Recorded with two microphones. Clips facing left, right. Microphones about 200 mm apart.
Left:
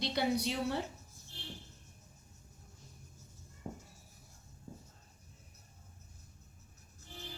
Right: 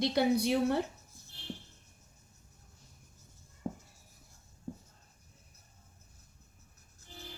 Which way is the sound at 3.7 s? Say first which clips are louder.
Right 6 dB; 65° right (ahead or behind).